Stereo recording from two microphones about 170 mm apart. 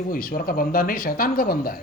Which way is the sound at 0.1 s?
55° left (ahead or behind).